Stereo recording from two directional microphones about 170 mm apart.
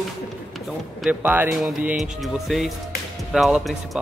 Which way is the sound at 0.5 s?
5° right (ahead or behind).